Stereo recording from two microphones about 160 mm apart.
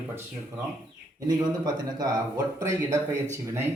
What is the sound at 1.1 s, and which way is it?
A man's voice, 25° right (ahead or behind).